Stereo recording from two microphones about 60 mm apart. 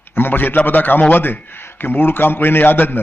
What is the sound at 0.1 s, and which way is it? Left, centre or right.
A man's voice, left.